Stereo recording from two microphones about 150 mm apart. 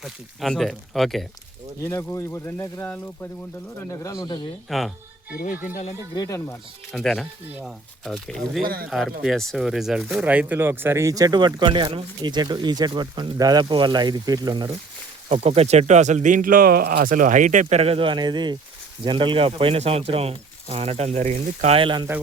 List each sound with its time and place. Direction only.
0.0 s speech: centre (ahead or behind)
1.8 s speech: 15° left (ahead or behind)
4.7 s speech: centre (ahead or behind)
6.1 s speech: 20° left (ahead or behind)
6.9 s speech: centre (ahead or behind)
8.6 s speech: 80° right
8.9 s speech: centre (ahead or behind); by 14.7 s 30° right (ahead or behind)
15.3 s speech: 45° right (ahead or behind)